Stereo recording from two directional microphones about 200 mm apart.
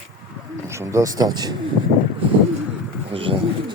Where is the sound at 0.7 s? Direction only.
15° right (ahead or behind).